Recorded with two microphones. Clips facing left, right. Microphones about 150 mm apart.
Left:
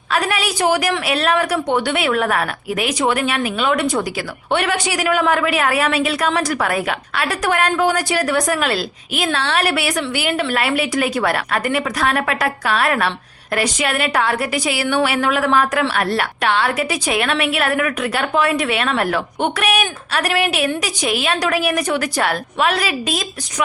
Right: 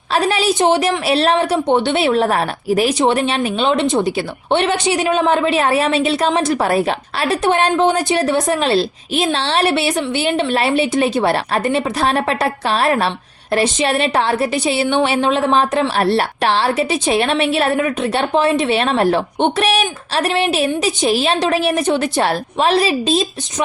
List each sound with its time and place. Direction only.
0.1 s a woman's voice: 30° right (ahead or behind)